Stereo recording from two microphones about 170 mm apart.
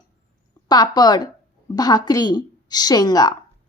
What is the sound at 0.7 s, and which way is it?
A woman's voice, 25° left (ahead or behind).